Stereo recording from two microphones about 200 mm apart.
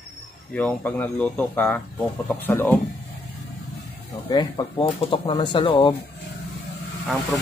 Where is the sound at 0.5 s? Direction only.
10° left (ahead or behind).